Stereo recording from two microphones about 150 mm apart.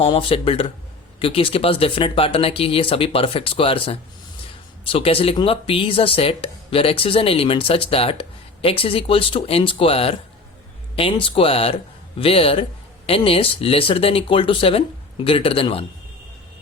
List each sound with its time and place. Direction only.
0.0 s speech: 35° left (ahead or behind)